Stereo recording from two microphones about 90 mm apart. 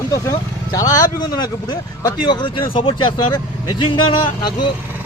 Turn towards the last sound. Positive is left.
turn(degrees=60)  # may be behind; listen again after turning